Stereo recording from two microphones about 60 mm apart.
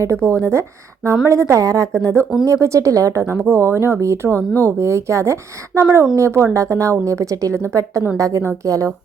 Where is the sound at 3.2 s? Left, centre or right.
Right.